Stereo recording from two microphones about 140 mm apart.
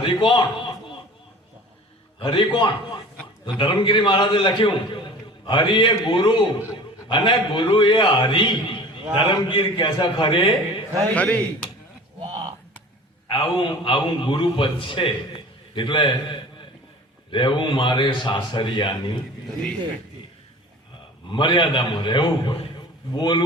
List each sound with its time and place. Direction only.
0.0 s a man's voice: 35° left (ahead or behind)
2.1 s a man's voice: 35° left (ahead or behind)
11.1 s a man's voice: 10° left (ahead or behind)
13.2 s a man's voice: 35° left (ahead or behind)
21.2 s a man's voice: 35° left (ahead or behind)